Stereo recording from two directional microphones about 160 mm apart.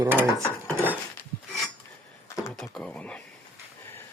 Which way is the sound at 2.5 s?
5° left (ahead or behind).